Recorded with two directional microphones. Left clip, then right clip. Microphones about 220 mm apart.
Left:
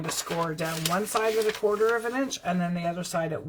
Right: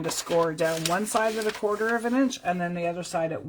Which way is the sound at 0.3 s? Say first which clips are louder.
Right 8 dB; 35° right (ahead or behind).